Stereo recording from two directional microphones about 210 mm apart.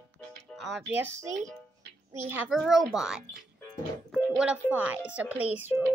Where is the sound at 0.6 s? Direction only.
Centre (ahead or behind).